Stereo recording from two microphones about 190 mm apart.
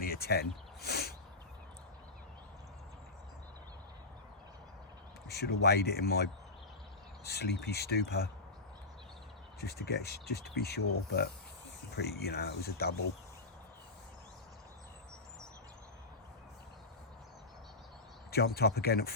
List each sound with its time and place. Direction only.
0.0 s a sound: 55° left (ahead or behind)
5.3 s speech: 60° left (ahead or behind)
7.3 s speech: 60° left (ahead or behind)
9.6 s speech: 55° left (ahead or behind)
18.3 s speech: 55° left (ahead or behind)